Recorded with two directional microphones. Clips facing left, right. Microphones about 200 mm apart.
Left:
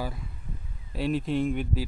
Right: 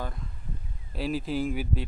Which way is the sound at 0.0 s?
5° left (ahead or behind).